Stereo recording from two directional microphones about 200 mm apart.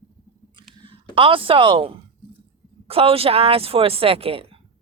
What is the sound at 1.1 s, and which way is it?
Speech, 25° right (ahead or behind).